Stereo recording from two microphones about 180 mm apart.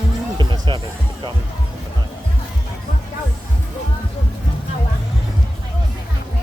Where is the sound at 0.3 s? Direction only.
25° right (ahead or behind).